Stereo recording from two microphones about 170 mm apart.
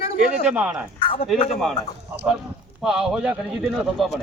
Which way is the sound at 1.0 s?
30° left (ahead or behind).